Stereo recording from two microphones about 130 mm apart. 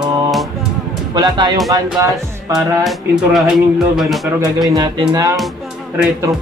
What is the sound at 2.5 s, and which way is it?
Music, centre (ahead or behind).